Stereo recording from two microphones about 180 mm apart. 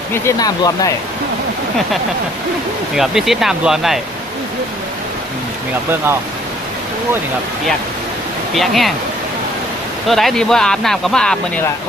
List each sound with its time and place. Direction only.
0.1 s speech: 20° left (ahead or behind)
2.9 s speech: centre (ahead or behind)
8.5 s speech: centre (ahead or behind)
10.1 s speech: centre (ahead or behind)